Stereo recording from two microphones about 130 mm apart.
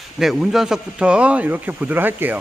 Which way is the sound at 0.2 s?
Centre (ahead or behind).